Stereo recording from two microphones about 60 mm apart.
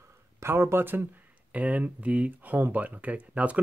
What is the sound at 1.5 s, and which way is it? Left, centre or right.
Speech, right.